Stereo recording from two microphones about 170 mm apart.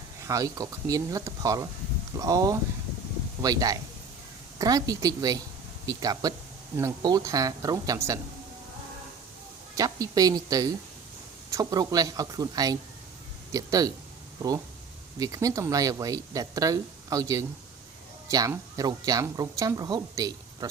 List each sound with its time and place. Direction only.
0.2 s speech: 20° right (ahead or behind)
9.7 s speech: 20° right (ahead or behind)
15.2 s speech: 20° right (ahead or behind)